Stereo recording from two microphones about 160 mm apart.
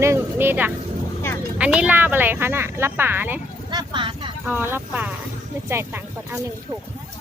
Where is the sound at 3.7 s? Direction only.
25° right (ahead or behind).